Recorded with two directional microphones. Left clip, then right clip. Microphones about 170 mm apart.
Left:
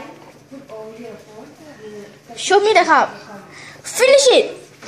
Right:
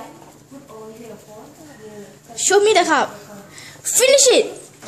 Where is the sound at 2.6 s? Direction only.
25° right (ahead or behind).